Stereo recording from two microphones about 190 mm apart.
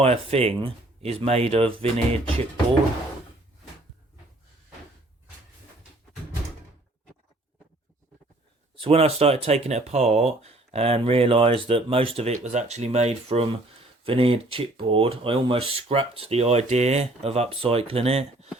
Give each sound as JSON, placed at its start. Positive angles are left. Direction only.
{"t": 0.0, "sound": "speech", "side_deg": -30}
{"t": 8.7, "sound": "speech", "side_deg": -30}